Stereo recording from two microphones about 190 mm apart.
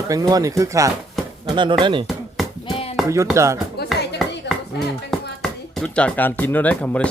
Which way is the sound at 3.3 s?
15° right (ahead or behind).